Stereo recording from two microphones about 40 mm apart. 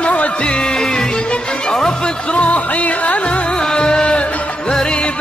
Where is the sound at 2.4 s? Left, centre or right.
Left.